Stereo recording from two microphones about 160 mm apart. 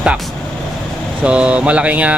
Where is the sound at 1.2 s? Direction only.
5° right (ahead or behind).